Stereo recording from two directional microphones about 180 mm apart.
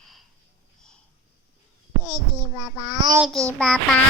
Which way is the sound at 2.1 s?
20° right (ahead or behind).